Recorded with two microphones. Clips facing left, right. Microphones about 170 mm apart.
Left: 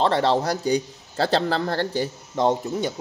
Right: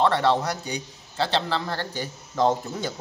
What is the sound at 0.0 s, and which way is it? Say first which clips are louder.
Speech: left 1 dB; 30° left (ahead or behind).